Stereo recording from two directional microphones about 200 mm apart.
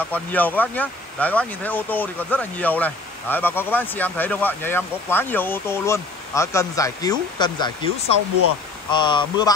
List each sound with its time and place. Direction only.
0.0 s speech: 10° left (ahead or behind)